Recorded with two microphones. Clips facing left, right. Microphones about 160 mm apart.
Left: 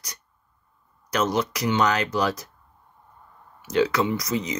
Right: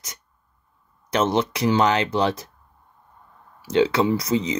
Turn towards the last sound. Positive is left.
turn(degrees=-30)  # may be behind; listen again after turning